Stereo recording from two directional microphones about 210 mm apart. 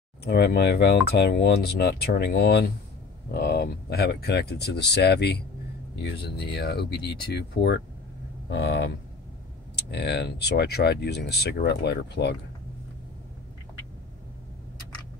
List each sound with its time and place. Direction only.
0.2 s speech: 50° left (ahead or behind)